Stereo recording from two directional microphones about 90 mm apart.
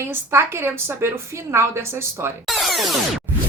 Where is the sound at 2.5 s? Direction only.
Centre (ahead or behind).